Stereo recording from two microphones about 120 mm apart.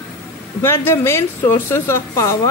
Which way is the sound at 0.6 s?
20° left (ahead or behind).